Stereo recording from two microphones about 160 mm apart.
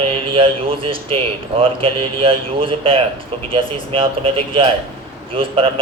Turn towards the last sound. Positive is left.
turn(degrees=-35)  # may be behind; listen again after turning